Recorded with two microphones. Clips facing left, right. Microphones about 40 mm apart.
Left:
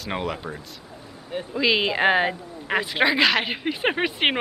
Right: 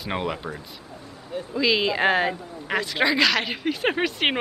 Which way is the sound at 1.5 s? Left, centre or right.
Centre.